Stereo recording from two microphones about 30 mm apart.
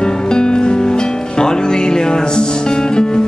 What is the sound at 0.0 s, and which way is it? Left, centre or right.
Music, left.